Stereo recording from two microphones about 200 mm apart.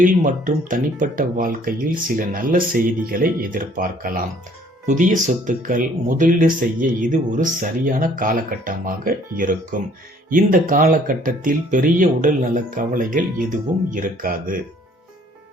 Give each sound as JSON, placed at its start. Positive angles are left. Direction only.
{"t": 0.0, "sound": "speech", "side_deg": -40}